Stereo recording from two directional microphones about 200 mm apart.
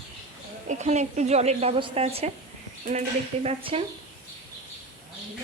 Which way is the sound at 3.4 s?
25° right (ahead or behind).